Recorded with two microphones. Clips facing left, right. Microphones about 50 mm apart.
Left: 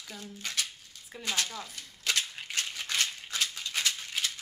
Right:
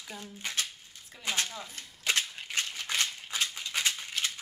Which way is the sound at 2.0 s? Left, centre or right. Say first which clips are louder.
Right 1 dB; right.